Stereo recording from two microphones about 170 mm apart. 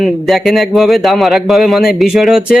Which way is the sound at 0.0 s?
Centre (ahead or behind).